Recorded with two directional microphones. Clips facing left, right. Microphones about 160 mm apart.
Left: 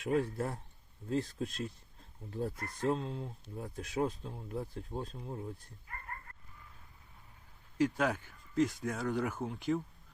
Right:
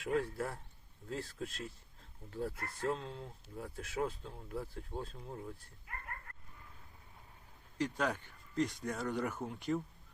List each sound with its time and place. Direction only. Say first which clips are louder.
0.0 s speech: left 3 dB; 20° left (ahead or behind)
7.9 s speech: left 3 dB; 5° left (ahead or behind)